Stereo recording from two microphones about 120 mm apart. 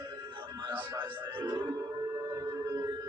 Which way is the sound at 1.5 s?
30° right (ahead or behind).